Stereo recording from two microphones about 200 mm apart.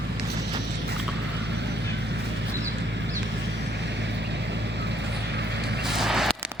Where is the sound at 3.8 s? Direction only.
60° right (ahead or behind).